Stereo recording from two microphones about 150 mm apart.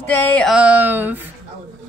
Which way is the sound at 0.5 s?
10° right (ahead or behind).